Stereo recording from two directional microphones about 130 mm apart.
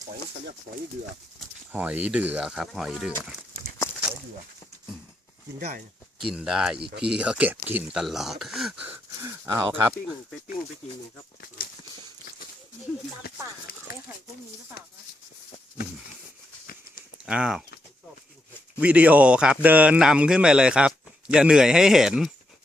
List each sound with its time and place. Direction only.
1.7 s a man's voice: 15° right (ahead or behind)
6.1 s a man's voice: 5° right (ahead or behind); by 9.9 s 20° right (ahead or behind)
17.2 s a man's voice: 5° right (ahead or behind)
18.8 s a man's voice: 10° right (ahead or behind)